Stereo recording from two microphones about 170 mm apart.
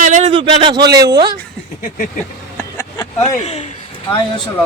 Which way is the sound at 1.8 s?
50° left (ahead or behind).